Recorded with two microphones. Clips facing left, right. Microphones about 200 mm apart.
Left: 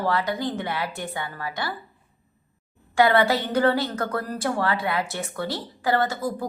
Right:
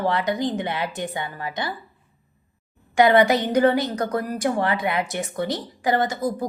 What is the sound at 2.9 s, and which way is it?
A woman's voice, 20° right (ahead or behind).